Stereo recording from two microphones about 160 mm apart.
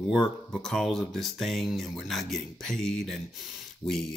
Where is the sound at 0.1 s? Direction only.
5° left (ahead or behind).